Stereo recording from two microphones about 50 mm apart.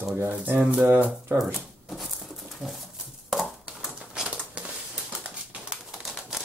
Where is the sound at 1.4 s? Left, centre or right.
Centre.